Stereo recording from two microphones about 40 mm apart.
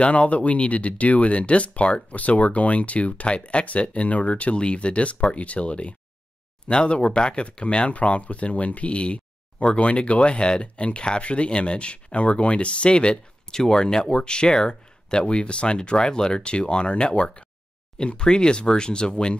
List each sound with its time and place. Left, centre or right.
0.0 s speech: left